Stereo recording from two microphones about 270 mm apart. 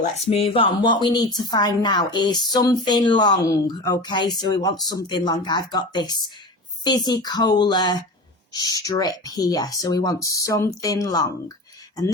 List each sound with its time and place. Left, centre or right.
0.0 s a woman's voice: left